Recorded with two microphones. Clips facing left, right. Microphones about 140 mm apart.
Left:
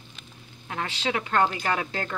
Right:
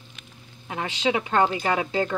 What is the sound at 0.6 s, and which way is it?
Speech, 20° right (ahead or behind).